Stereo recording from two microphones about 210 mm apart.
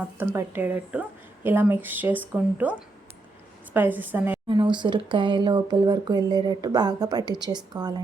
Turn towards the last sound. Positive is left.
turn(degrees=-20)  # may be behind; listen again after turning